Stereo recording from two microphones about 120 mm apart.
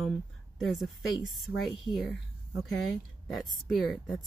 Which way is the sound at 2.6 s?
Centre (ahead or behind).